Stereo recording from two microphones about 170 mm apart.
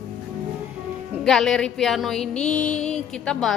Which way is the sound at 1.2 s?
Centre (ahead or behind).